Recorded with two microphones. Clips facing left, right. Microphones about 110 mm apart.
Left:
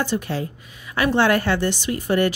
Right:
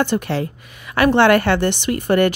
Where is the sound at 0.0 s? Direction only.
65° right (ahead or behind).